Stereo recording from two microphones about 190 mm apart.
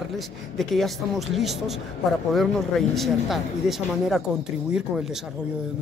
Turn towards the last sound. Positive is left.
turn(degrees=-5)  # may be behind; listen again after turning